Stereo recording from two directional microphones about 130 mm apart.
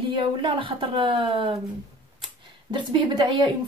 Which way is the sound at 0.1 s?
40° right (ahead or behind).